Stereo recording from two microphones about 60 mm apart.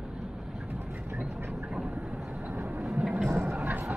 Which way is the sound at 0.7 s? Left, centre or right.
Right.